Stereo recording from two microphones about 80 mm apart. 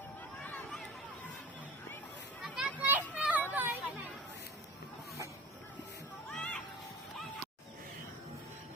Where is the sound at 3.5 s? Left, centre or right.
Right.